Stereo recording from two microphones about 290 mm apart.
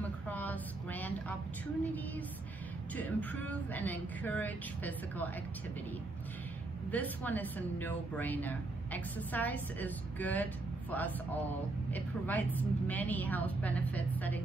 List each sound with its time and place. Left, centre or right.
0.0 s a sound: centre
3.0 s speech: centre
6.9 s speech: centre